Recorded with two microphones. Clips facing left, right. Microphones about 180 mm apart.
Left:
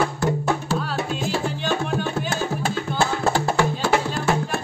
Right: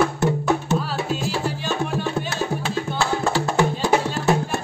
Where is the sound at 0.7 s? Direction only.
Centre (ahead or behind).